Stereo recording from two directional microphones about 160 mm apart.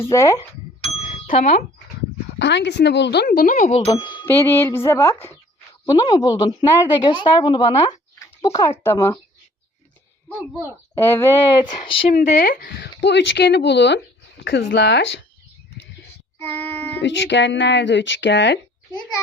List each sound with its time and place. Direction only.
0.0 s a woman's voice: 20° left (ahead or behind)
0.8 s ding: 40° left (ahead or behind)
1.4 s speech: 40° left (ahead or behind)
2.4 s speech: 90° left; by 3.8 s 55° left (ahead or behind)
3.9 s a sound: 20° left (ahead or behind)
4.9 s a woman's voice: 15° left (ahead or behind)
10.2 s speech: 15° left (ahead or behind); by 12.0 s 35° left (ahead or behind)
12.2 s speech: 50° left (ahead or behind)
12.5 s speech: 80° left
16.4 s child singing: 10° left (ahead or behind)
17.0 s speech: 90° left